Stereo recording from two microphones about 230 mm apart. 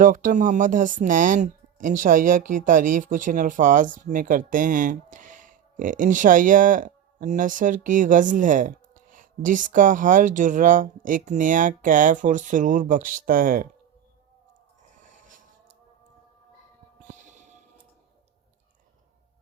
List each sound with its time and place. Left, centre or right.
0.0 s speech: right
17.1 s music: right